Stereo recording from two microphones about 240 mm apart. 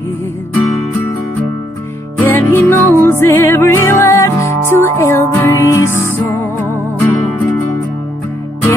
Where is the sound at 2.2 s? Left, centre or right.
Centre.